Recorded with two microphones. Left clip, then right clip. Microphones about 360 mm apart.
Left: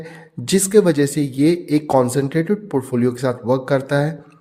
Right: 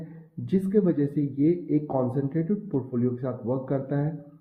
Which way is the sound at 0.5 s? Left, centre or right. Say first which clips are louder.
Left 10 dB; left.